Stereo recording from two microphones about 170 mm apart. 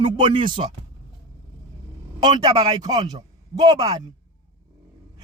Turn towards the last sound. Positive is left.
turn(degrees=-20)  # may be behind; listen again after turning